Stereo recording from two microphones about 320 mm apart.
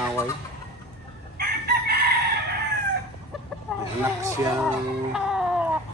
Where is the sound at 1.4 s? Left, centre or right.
Right.